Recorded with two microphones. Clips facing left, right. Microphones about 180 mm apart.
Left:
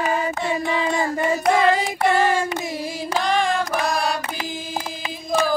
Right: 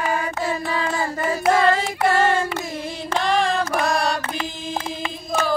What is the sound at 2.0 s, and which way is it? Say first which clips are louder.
Child singing: even; centre (ahead or behind).